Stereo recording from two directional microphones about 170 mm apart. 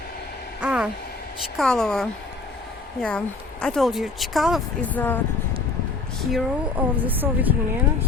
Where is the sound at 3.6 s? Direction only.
Centre (ahead or behind).